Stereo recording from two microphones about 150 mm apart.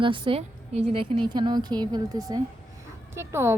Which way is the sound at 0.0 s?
35° right (ahead or behind).